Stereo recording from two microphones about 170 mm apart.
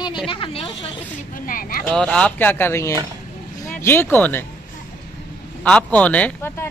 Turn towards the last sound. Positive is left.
turn(degrees=15)  # may be behind; listen again after turning